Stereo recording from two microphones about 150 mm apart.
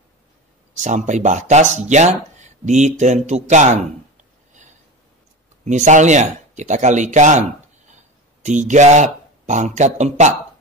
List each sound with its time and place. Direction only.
0.7 s speech: 55° right (ahead or behind)
4.6 s a sound: 55° right (ahead or behind)
5.7 s speech: 55° right (ahead or behind)
8.5 s speech: 55° right (ahead or behind)